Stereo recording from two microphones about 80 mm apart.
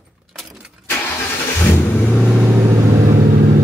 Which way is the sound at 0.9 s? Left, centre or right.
Left.